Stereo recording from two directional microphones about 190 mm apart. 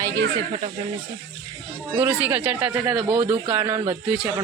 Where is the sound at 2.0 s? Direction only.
10° right (ahead or behind).